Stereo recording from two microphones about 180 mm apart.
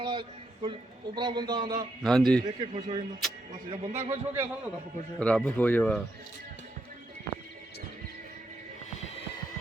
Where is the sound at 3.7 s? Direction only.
40° right (ahead or behind).